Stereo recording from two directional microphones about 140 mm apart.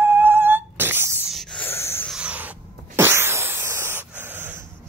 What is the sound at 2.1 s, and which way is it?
Sneeze, 10° right (ahead or behind).